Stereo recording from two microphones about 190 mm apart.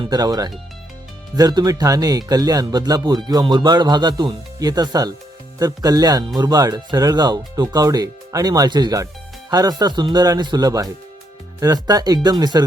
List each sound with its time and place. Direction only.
0.0 s speech: 20° right (ahead or behind)